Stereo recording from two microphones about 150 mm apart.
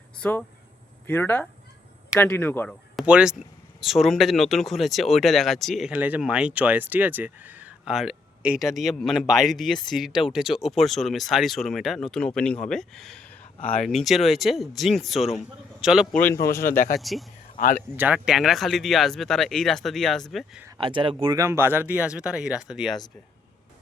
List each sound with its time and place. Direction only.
0.2 s speech: 10° left (ahead or behind)
2.9 s speech: 5° right (ahead or behind)
5.9 s a man's voice: 10° right (ahead or behind)
16.3 s speech: 20° left (ahead or behind)
16.6 s speech: 70° left (ahead or behind)
17.0 s speech: centre (ahead or behind)
17.9 s speech: 10° right (ahead or behind)
20.7 s speech: 35° right (ahead or behind)
21.3 s speech: 20° right (ahead or behind)